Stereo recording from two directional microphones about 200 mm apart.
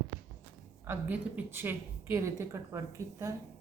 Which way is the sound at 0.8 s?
10° right (ahead or behind).